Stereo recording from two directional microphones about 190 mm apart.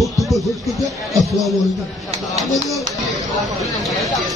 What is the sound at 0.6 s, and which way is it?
Speech, centre (ahead or behind).